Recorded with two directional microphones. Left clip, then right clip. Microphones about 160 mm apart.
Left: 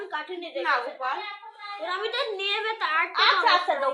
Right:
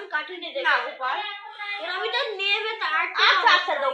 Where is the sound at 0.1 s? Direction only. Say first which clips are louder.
Right 7 dB; 40° left (ahead or behind).